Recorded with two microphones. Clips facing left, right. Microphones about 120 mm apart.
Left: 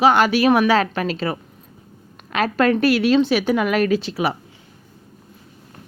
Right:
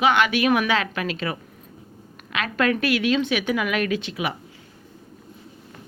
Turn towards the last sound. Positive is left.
turn(degrees=35)  # may be behind; listen again after turning